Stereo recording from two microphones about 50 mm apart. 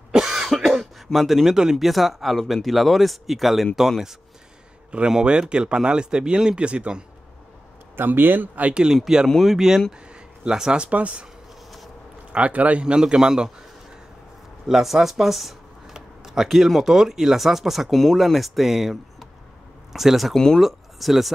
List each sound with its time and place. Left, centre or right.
0.1 s cough: centre
0.6 s speech: centre
5.2 s speech: centre
7.9 s speech: right
8.7 s a man's voice: centre
10.0 s a sound: centre
10.9 s speech: right
12.3 s speech: right
12.8 s a man's voice: centre
14.7 s speech: centre
20.3 s speech: centre
20.6 s speech: centre